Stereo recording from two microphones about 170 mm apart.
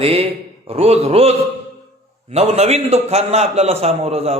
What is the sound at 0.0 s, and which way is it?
A man's voice, 35° right (ahead or behind).